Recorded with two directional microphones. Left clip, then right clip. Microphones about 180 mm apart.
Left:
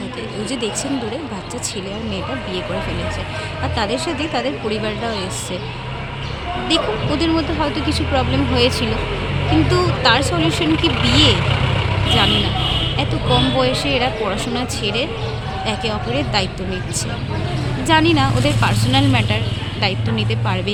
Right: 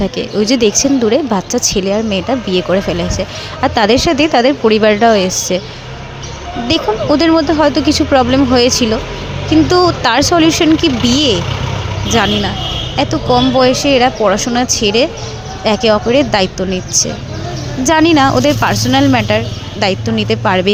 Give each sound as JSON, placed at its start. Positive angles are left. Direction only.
{"t": 0.2, "sound": "speech", "side_deg": -50}
{"t": 6.7, "sound": "speech", "side_deg": -50}
{"t": 13.0, "sound": "speech", "side_deg": -40}
{"t": 16.6, "sound": "speech", "side_deg": -25}
{"t": 17.8, "sound": "speech", "side_deg": -45}